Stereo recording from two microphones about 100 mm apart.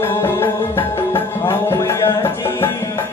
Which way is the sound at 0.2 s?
25° left (ahead or behind).